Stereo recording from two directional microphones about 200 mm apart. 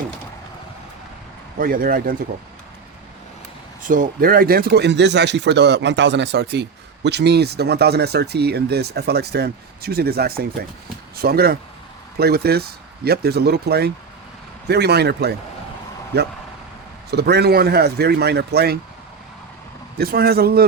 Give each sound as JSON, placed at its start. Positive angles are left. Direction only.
{"t": 1.5, "sound": "speech", "side_deg": -45}
{"t": 3.8, "sound": "speech", "side_deg": -40}
{"t": 20.0, "sound": "speech", "side_deg": -50}